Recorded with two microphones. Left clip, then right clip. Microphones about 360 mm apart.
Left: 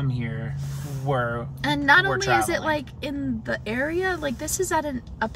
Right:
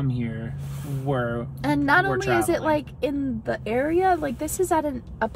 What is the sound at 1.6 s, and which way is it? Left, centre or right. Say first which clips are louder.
Speech: left 2 dB; centre.